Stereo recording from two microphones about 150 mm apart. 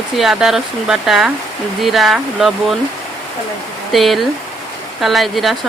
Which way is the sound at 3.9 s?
Centre (ahead or behind).